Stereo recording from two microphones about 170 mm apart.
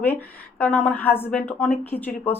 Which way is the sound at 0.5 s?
10° left (ahead or behind).